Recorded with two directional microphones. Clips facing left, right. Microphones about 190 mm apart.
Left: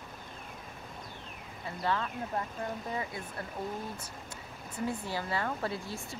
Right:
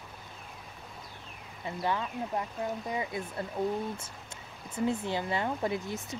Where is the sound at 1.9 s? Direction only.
15° right (ahead or behind).